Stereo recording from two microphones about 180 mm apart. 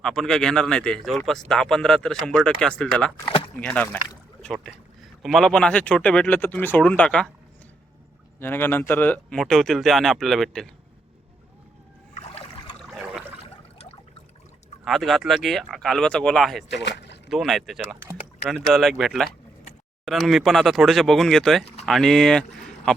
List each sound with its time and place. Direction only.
0.0 s speech: centre (ahead or behind)
8.4 s speech: 10° left (ahead or behind)
12.1 s rowboat: 30° left (ahead or behind)
14.8 s speech: centre (ahead or behind)
16.6 s speech: 75° left (ahead or behind)
17.2 s speech: centre (ahead or behind)